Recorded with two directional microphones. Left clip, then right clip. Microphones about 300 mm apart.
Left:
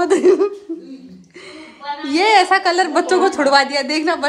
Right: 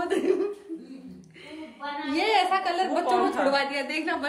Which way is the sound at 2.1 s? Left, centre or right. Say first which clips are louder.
Left 11 dB; left.